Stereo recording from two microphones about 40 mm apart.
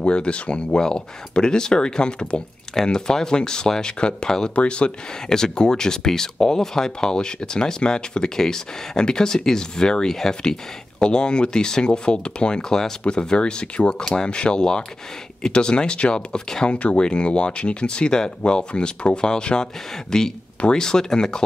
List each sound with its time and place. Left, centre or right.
0.0 s speech: left
4.6 s speech: left
5.3 s speech: centre
16.7 s speech: left; by 21.4 s centre